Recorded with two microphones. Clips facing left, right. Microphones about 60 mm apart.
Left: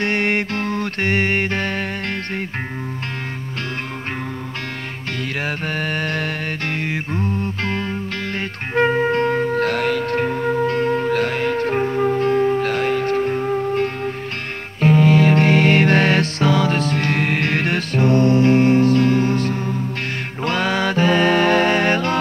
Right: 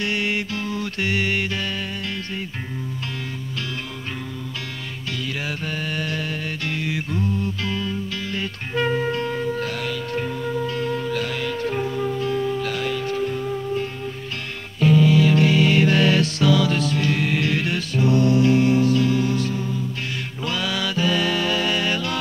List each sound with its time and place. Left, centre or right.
0.0 s music: left
5.8 s mantra: left
6.8 s music: left